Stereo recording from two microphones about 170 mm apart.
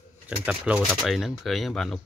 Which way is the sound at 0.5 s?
5° right (ahead or behind).